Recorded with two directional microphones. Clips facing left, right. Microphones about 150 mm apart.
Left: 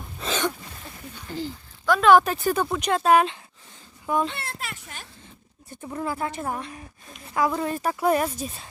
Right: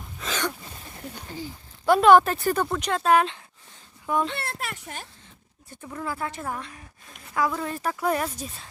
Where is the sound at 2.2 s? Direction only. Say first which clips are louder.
Even; 15° left (ahead or behind).